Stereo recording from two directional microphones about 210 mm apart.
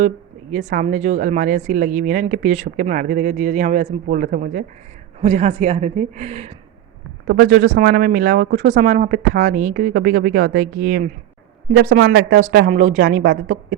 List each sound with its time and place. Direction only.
0.5 s speech: 35° right (ahead or behind)
5.2 s speech: 30° right (ahead or behind)
7.3 s speech: 45° right (ahead or behind)